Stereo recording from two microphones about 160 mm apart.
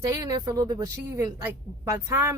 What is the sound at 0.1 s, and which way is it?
Speech, 25° right (ahead or behind).